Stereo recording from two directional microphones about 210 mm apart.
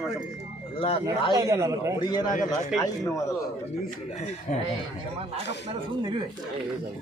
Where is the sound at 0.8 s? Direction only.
25° left (ahead or behind).